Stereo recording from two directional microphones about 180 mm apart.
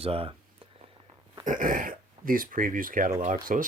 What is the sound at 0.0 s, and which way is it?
Speech, 30° right (ahead or behind).